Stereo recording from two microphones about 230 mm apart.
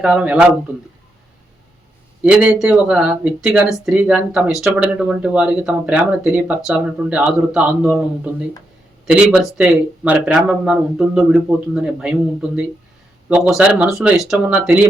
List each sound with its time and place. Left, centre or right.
0.0 s speech: centre
2.2 s speech: centre
9.0 s speech: centre